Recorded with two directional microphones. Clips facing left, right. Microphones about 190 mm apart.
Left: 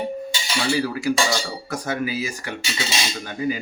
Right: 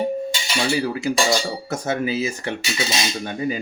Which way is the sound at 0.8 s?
20° right (ahead or behind).